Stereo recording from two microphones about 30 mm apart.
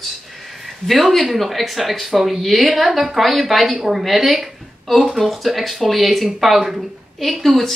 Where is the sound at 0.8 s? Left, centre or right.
Centre.